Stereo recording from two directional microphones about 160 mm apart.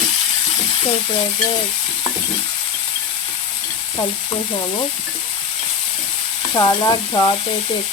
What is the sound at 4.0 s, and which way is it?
Frying, 30° left (ahead or behind).